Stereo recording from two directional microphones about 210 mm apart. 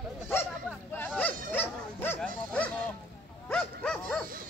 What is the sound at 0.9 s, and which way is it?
Speech, 10° left (ahead or behind).